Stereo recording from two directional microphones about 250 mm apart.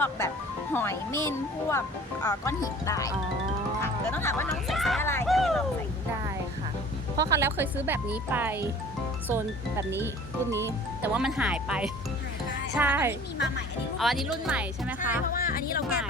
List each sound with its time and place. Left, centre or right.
0.7 s speech: centre
4.1 s speech: centre
7.2 s speech: centre
15.3 s speech: left